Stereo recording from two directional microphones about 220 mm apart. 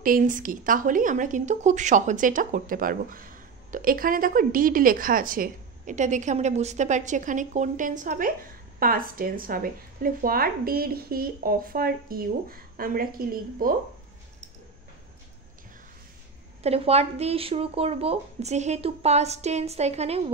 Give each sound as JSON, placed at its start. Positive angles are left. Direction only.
{"t": 0.0, "sound": "a woman's voice", "side_deg": -40}
{"t": 16.6, "sound": "speech", "side_deg": -25}